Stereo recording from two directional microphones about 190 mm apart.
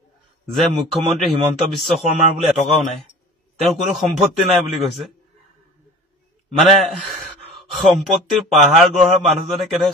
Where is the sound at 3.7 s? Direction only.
Centre (ahead or behind).